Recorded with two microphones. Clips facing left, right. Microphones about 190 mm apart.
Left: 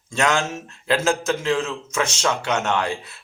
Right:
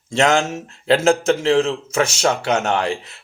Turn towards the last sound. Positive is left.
turn(degrees=-35)  # may be behind; listen again after turning